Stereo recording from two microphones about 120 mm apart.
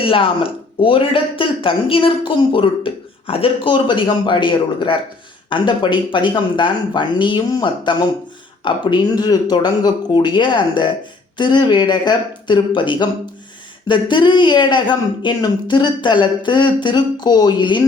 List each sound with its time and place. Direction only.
0.0 s speech: 50° left (ahead or behind)